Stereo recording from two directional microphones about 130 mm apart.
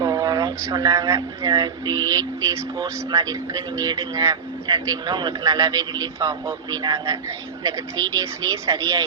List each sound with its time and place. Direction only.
0.0 s speech: 30° right (ahead or behind)